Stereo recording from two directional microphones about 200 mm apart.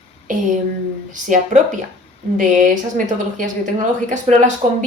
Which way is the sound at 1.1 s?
40° right (ahead or behind).